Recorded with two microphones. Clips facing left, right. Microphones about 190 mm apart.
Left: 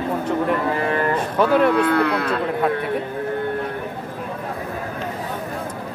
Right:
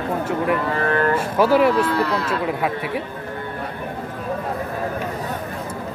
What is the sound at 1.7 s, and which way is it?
Speech, 60° left (ahead or behind).